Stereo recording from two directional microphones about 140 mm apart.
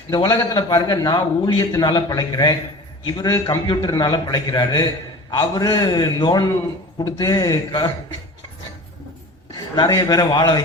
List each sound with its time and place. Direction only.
0.1 s a man's voice: 30° left (ahead or behind)
9.7 s a man's voice: 30° left (ahead or behind)